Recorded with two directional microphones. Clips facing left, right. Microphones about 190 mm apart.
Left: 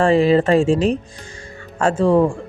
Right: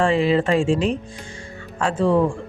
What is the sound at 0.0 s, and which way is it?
Speech, 40° left (ahead or behind).